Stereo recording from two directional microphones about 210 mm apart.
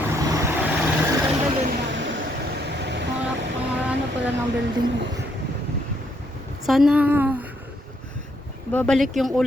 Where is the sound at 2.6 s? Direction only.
55° right (ahead or behind).